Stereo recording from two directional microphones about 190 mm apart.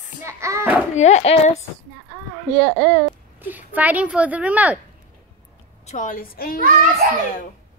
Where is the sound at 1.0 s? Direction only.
35° left (ahead or behind).